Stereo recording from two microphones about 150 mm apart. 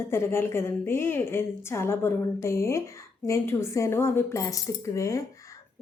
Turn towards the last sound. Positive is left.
turn(degrees=20)  # may be behind; listen again after turning